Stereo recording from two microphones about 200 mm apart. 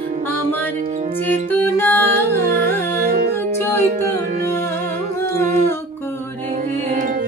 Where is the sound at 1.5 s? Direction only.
10° left (ahead or behind).